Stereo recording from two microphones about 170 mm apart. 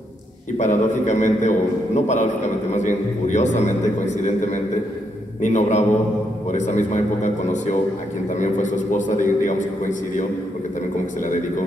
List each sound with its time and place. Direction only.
0.6 s a man's voice: 45° left (ahead or behind)